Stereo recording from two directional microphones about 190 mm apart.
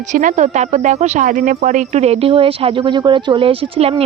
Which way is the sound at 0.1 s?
40° right (ahead or behind).